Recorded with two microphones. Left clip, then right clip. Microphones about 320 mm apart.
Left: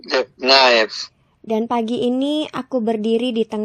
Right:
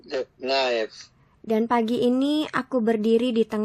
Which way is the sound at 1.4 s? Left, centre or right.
Centre.